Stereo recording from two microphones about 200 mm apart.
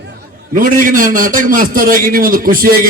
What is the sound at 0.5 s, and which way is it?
A man's voice, 40° right (ahead or behind).